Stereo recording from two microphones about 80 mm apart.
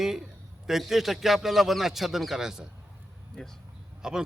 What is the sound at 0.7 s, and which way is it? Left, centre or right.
A man's voice, centre.